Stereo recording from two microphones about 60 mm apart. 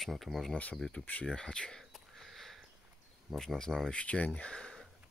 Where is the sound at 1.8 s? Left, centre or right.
Centre.